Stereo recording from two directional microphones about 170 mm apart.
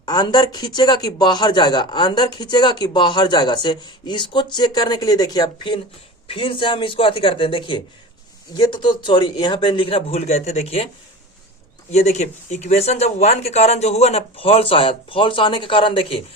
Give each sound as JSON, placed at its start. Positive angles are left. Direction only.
{"t": 0.0, "sound": "speech", "side_deg": 25}
{"t": 11.9, "sound": "speech", "side_deg": 40}